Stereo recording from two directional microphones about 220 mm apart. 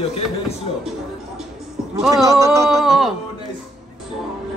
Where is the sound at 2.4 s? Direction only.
15° right (ahead or behind).